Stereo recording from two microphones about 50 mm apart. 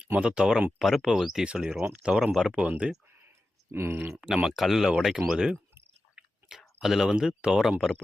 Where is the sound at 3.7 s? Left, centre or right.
Right.